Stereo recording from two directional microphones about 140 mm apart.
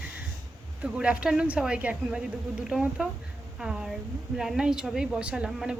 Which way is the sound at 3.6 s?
5° right (ahead or behind).